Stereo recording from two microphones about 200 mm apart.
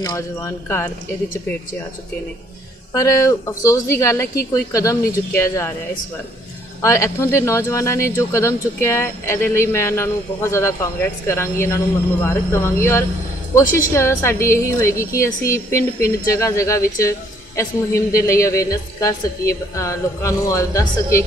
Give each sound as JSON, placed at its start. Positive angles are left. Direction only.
{"t": 0.0, "sound": "speech", "side_deg": 15}
{"t": 2.9, "sound": "speech", "side_deg": 15}
{"t": 6.8, "sound": "speech", "side_deg": 15}
{"t": 13.6, "sound": "speech", "side_deg": 15}